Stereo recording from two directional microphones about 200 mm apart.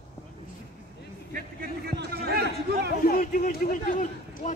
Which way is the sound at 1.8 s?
55° right (ahead or behind).